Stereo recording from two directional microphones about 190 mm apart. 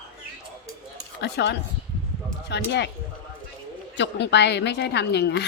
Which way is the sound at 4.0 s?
65° left (ahead or behind).